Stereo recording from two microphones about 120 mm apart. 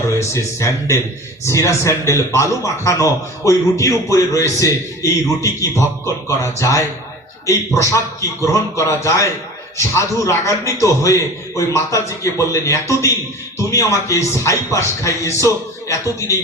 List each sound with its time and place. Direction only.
0.2 s a man's voice: 25° left (ahead or behind)